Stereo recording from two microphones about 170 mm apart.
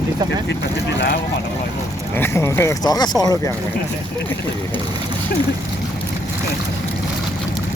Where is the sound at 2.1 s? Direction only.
15° left (ahead or behind).